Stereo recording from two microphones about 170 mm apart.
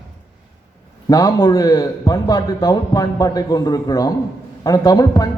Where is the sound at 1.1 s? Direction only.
20° left (ahead or behind).